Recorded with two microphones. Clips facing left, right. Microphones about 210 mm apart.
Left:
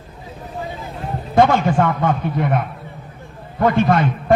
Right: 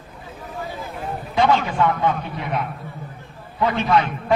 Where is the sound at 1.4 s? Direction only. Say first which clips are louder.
Left 4 dB; 50° left (ahead or behind).